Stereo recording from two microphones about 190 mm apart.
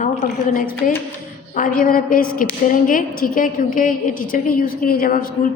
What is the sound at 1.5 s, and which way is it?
A woman's voice, 45° left (ahead or behind).